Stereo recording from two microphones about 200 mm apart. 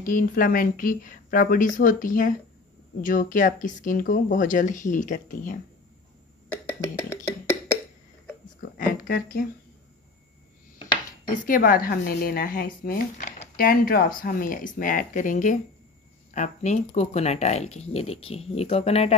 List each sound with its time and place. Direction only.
0.0 s speech: 45° left (ahead or behind)
8.7 s a sound: 45° left (ahead or behind)
11.3 s speech: 45° left (ahead or behind)